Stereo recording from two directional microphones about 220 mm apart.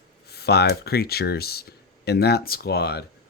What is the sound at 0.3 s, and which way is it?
Speech, 45° left (ahead or behind).